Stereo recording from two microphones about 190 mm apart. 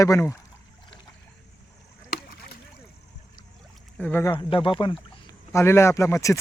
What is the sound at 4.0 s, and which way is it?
Speech, 10° left (ahead or behind).